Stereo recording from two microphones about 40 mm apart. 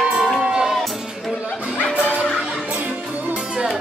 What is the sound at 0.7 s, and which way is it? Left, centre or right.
Music, centre.